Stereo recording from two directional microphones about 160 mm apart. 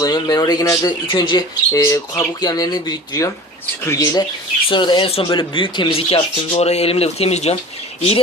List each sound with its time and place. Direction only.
0.0 s speech: 25° left (ahead or behind); by 7.6 s 40° left (ahead or behind)